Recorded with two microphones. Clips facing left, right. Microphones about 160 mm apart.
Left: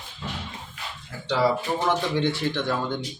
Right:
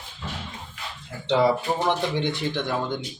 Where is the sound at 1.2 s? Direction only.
20° right (ahead or behind).